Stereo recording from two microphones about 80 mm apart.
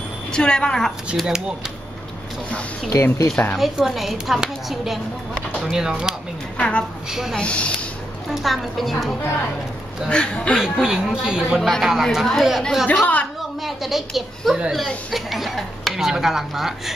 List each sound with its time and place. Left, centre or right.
0.3 s a woman's voice: centre
1.1 s speech: centre
2.9 s speech: left
3.5 s speech: centre
7.3 s a woman's voice: centre
8.3 s speech: centre
10.0 s a woman's voice: centre
10.6 s speech: centre
12.8 s a woman's voice: centre
13.6 s speech: centre